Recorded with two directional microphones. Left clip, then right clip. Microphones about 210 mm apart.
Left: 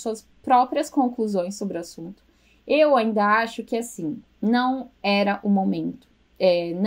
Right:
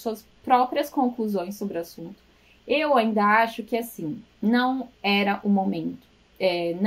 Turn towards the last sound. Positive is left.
turn(degrees=35)  # may be behind; listen again after turning